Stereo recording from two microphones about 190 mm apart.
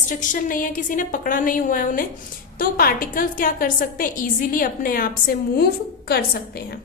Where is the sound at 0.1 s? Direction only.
45° left (ahead or behind).